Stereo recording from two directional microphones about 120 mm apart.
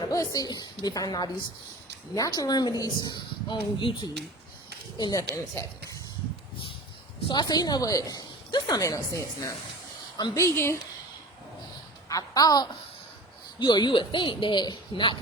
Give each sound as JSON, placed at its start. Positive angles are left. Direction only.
{"t": 0.1, "sound": "a woman's voice", "side_deg": 30}
{"t": 5.6, "sound": "a woman's voice", "side_deg": 20}
{"t": 7.3, "sound": "a woman's voice", "side_deg": 35}
{"t": 12.0, "sound": "a woman's voice", "side_deg": 30}